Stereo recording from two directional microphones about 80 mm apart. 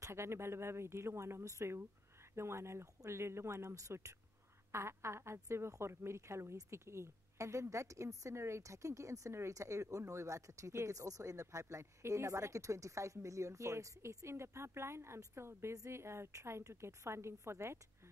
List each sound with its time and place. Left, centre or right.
0.0 s a woman's voice: right